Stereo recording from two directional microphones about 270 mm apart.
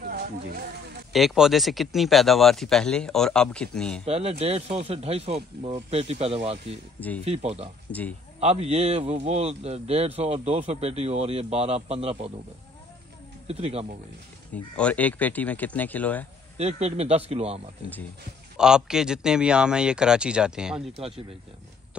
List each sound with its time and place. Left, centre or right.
0.0 s a sound: right
1.1 s speech: centre
4.0 s speech: right
13.5 s speech: right
14.5 s speech: centre
16.5 s speech: right
18.6 s speech: centre